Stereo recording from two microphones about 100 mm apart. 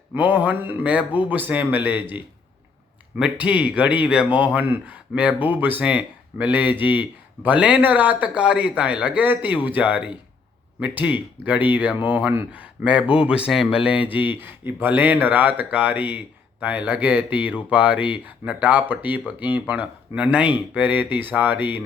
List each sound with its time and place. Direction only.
0.1 s speech: 15° right (ahead or behind)